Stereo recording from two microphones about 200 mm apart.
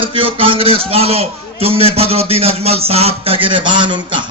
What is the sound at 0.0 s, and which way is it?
A man's voice, 25° right (ahead or behind).